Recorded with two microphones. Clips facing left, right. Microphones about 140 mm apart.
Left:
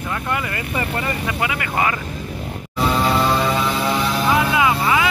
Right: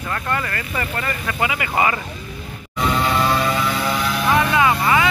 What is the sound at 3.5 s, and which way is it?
Vehicle, 25° left (ahead or behind).